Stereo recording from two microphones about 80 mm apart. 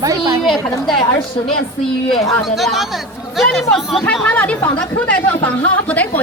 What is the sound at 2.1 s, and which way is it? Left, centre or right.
Speech, centre.